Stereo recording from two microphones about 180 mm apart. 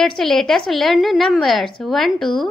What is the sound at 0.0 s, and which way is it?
A woman's voice, centre (ahead or behind).